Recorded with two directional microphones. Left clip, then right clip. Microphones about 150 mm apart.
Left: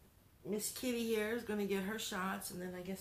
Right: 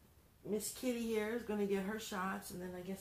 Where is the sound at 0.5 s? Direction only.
20° left (ahead or behind).